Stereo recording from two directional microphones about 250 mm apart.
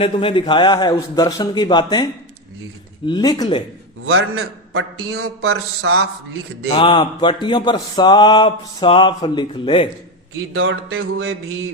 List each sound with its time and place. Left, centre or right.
0.0 s a man's voice: left
3.1 s a man's voice: centre
4.0 s a man's voice: right
6.7 s speech: centre
10.5 s music: right